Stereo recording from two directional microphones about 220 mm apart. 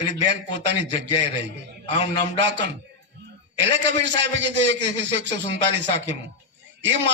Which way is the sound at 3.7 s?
55° right (ahead or behind).